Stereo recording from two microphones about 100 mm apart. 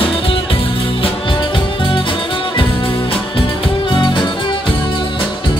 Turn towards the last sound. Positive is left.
turn(degrees=50)  # may be behind; listen again after turning